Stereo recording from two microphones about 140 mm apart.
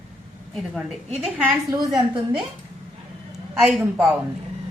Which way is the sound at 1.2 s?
10° right (ahead or behind).